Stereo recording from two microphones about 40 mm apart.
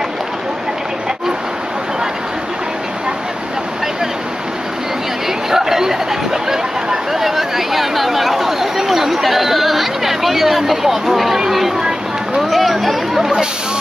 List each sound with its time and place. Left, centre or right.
5.5 s a sound: centre
12.4 s speech: centre
13.2 s speech: centre